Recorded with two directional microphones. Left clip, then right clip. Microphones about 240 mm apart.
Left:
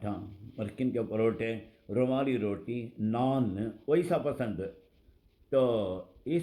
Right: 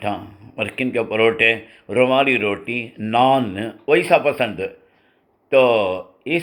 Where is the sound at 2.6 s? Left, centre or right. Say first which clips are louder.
Right 13 dB; right.